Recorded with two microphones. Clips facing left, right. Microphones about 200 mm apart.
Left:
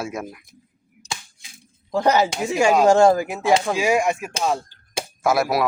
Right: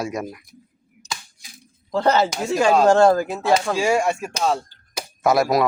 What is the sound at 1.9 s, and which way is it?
A man's voice, 15° left (ahead or behind).